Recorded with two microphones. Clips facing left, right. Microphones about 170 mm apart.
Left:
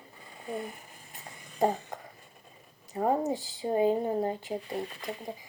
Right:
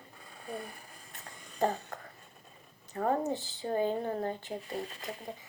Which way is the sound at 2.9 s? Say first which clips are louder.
Left 3 dB; 15° left (ahead or behind).